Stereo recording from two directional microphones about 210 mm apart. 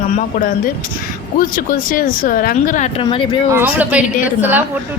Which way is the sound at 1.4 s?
40° left (ahead or behind).